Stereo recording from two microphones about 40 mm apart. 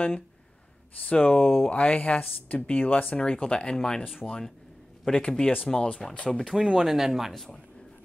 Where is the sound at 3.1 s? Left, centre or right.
Left.